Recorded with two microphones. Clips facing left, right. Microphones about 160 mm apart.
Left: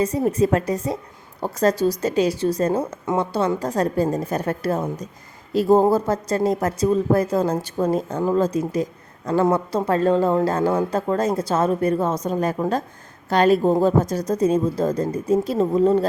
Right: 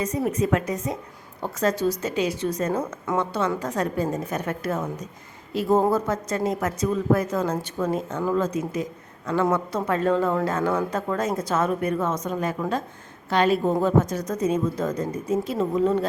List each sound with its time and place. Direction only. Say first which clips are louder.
0.0 s a woman's voice: left 5 dB; 30° left (ahead or behind)